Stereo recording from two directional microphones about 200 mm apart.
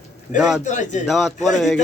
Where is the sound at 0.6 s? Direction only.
40° left (ahead or behind).